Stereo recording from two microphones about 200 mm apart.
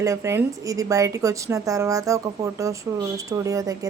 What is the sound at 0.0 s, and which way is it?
A woman's voice, 15° right (ahead or behind).